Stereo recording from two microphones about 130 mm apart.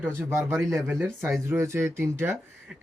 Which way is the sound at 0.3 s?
20° right (ahead or behind).